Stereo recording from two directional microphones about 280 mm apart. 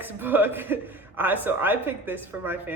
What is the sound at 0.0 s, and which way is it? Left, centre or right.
A man's voice, centre.